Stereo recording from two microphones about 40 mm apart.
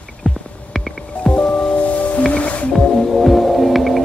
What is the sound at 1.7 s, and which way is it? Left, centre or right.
Music, left.